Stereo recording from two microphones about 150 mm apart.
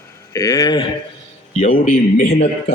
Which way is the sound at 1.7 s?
65° left (ahead or behind).